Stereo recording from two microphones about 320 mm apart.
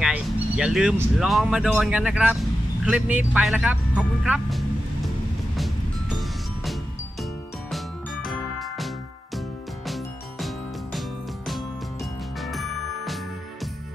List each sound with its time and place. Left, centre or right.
0.0 s speech: centre
5.6 s vehicle: centre
7.7 s music: centre